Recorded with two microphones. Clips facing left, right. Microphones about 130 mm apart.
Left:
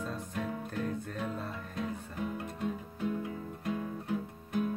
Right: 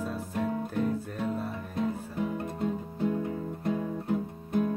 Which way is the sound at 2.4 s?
35° right (ahead or behind).